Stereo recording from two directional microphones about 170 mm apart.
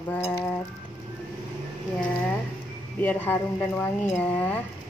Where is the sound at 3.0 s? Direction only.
10° left (ahead or behind).